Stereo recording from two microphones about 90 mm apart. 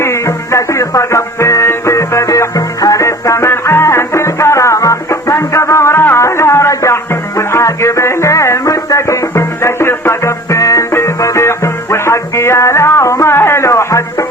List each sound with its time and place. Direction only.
0.0 s music: 30° left (ahead or behind)